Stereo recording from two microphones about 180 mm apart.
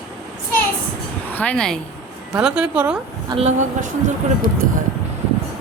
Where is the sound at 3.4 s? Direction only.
40° right (ahead or behind).